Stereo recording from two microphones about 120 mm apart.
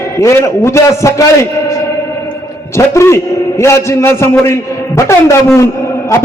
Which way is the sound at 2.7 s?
25° left (ahead or behind).